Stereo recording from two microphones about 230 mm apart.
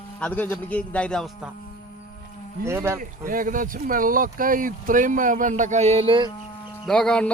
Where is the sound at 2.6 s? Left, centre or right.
Centre.